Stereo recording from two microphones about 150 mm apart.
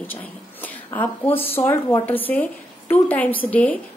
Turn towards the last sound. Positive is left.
turn(degrees=10)  # may be behind; listen again after turning